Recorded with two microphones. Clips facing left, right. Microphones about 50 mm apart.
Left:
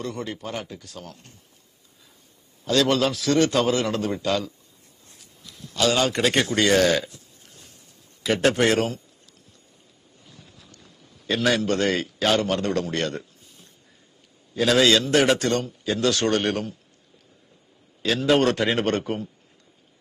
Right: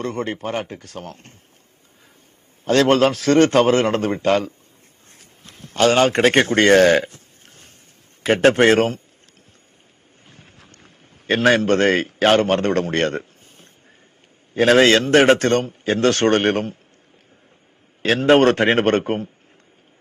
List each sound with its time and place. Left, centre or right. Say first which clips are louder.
0.0 s a man's voice: right 6 dB; right
2.6 s a man's voice: right 6 dB; right
5.2 s a sound: right 1 dB; right
8.2 s a man's voice: right 6 dB; right
10.2 s a sound: right 2 dB; right
14.5 s a man's voice: right 5 dB; right
18.0 s a man's voice: right 6 dB; right